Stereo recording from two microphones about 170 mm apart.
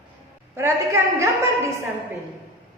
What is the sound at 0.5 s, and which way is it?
Speech, 15° right (ahead or behind).